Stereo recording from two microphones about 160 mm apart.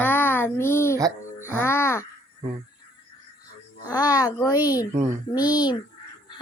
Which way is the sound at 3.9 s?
25° left (ahead or behind).